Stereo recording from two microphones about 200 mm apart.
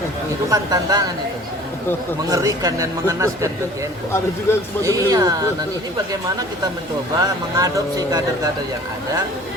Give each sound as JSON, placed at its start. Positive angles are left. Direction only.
{"t": 0.5, "sound": "speech", "side_deg": -20}
{"t": 2.3, "sound": "speech", "side_deg": -15}
{"t": 4.8, "sound": "speech", "side_deg": -15}
{"t": 7.2, "sound": "speech", "side_deg": -15}